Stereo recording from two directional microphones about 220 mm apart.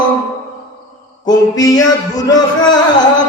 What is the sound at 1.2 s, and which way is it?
Mantra, 15° left (ahead or behind).